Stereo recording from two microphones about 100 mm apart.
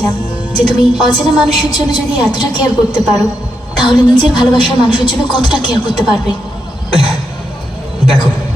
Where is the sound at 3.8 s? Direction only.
50° left (ahead or behind).